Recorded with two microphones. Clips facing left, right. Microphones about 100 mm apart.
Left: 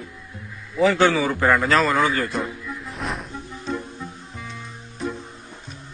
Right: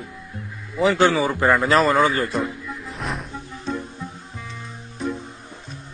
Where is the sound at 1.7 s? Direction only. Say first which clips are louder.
Right 2 dB; 30° right (ahead or behind).